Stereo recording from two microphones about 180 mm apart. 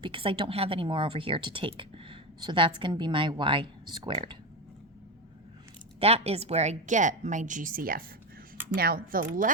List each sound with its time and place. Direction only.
0.0 s speech: 30° right (ahead or behind)
6.0 s a woman's voice: 35° right (ahead or behind); by 9.5 s 50° right (ahead or behind)